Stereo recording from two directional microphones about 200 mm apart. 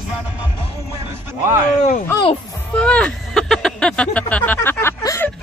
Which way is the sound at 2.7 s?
5° left (ahead or behind).